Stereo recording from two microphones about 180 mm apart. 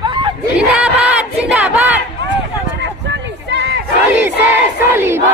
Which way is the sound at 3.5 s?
75° right (ahead or behind).